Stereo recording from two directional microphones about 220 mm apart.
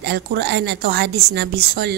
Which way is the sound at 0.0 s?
50° right (ahead or behind).